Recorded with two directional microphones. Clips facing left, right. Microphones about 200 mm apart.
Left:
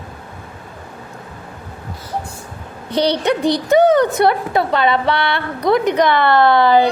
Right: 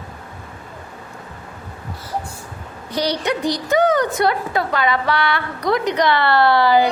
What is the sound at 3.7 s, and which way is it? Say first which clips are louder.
A woman's voice: left 5 dB; 25° left (ahead or behind).